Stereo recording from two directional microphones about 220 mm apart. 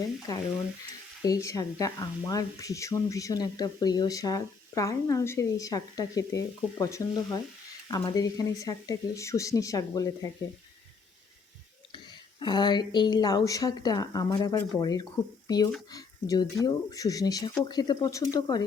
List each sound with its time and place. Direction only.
0.3 s speech: 15° left (ahead or behind)
12.4 s speech: 20° left (ahead or behind)